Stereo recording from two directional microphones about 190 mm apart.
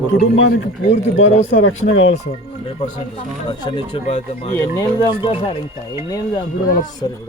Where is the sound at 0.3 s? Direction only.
90° left.